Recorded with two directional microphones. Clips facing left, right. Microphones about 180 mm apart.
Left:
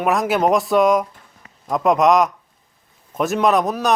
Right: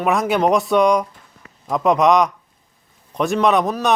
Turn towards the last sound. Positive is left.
turn(degrees=0)  # may be behind; listen again after turning